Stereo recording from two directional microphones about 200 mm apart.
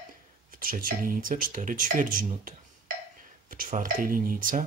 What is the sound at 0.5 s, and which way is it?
Speech, 45° right (ahead or behind).